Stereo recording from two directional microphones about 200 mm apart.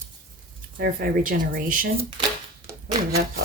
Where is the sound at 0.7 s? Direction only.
45° right (ahead or behind).